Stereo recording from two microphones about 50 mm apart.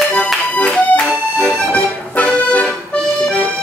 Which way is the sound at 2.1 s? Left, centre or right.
Left.